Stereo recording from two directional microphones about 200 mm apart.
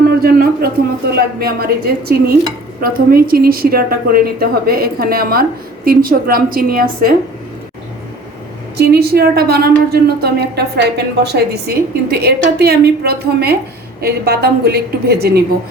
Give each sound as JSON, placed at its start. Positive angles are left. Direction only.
{"t": 0.2, "sound": "a woman's voice", "side_deg": -50}
{"t": 8.8, "sound": "a woman's voice", "side_deg": -50}